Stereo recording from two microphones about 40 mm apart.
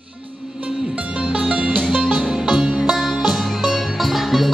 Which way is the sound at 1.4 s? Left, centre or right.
Right.